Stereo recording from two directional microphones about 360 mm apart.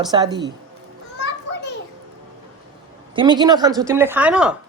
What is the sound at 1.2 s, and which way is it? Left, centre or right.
Children playing, left.